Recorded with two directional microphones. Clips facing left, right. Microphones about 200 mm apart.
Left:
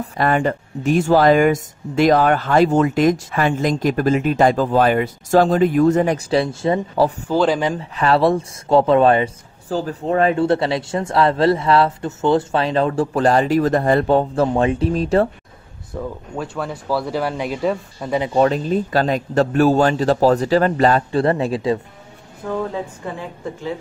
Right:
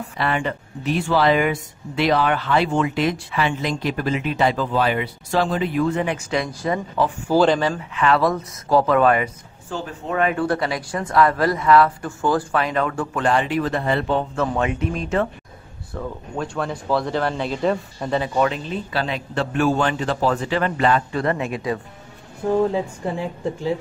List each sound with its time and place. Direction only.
0.0 s speech: 45° left (ahead or behind)
15.9 s speech: 5° left (ahead or behind)
18.2 s a man's voice: 30° left (ahead or behind)
22.4 s speech: 25° right (ahead or behind)